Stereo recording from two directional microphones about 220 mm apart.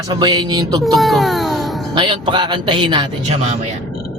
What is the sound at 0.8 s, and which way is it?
Speech, centre (ahead or behind).